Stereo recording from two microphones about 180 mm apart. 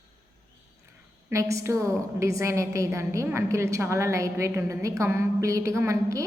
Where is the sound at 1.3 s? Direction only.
15° right (ahead or behind).